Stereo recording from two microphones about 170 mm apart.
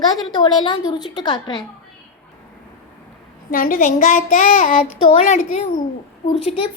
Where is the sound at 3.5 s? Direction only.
55° left (ahead or behind).